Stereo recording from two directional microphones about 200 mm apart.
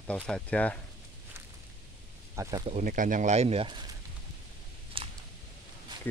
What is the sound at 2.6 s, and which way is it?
Speech, 35° right (ahead or behind).